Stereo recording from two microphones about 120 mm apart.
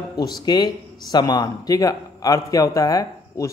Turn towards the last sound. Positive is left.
turn(degrees=30)  # may be behind; listen again after turning